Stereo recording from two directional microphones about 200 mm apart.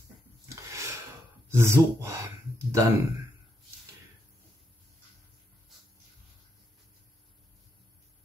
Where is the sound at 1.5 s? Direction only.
15° right (ahead or behind).